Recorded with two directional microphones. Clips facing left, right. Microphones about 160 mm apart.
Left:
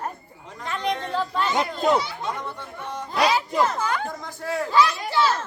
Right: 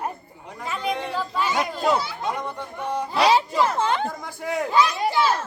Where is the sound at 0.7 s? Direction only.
10° right (ahead or behind).